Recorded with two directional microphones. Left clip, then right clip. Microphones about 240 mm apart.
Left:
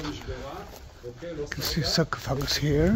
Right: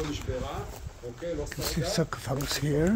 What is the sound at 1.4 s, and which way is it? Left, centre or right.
Speech, centre.